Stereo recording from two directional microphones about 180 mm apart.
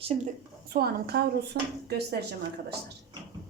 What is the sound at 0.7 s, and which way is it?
A woman's voice, 60° right (ahead or behind).